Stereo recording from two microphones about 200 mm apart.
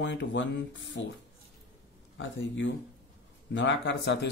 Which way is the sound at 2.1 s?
65° left (ahead or behind).